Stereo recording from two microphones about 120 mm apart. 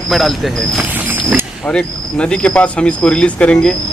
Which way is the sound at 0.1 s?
Centre (ahead or behind).